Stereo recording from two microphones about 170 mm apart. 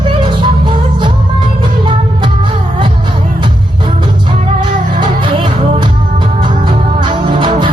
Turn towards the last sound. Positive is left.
turn(degrees=-30)  # may be behind; listen again after turning